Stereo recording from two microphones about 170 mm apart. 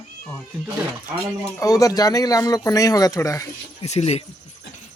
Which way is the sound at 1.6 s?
20° left (ahead or behind).